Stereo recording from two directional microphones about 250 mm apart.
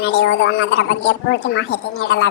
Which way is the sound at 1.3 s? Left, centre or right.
Left.